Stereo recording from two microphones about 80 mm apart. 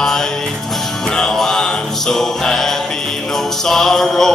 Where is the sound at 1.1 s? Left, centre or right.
Centre.